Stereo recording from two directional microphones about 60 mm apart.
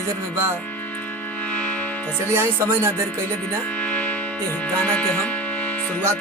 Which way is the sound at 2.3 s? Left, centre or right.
Right.